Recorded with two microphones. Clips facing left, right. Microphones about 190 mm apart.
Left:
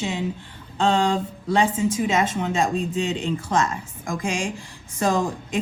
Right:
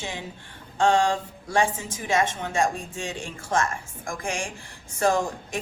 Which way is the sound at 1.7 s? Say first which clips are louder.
Left 5 dB; 90° left.